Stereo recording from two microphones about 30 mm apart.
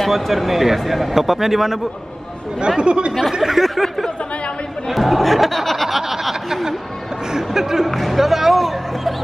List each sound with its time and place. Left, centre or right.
0.0 s a man's voice: centre
2.8 s speech: right
3.3 s a man's voice: centre
7.9 s speech: centre